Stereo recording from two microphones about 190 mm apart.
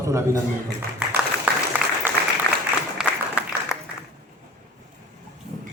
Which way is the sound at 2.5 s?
15° left (ahead or behind).